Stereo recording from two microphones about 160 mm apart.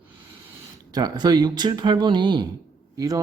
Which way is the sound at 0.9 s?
25° right (ahead or behind).